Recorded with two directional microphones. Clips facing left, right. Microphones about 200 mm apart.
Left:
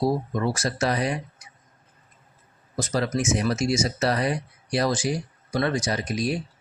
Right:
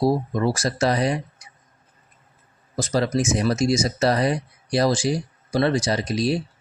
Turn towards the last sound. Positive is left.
turn(degrees=-35)  # may be behind; listen again after turning